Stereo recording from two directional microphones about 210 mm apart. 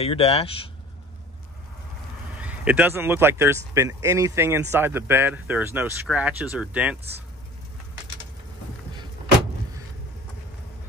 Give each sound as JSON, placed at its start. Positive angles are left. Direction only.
{"t": 0.0, "sound": "speech", "side_deg": 30}
{"t": 2.4, "sound": "speech", "side_deg": -5}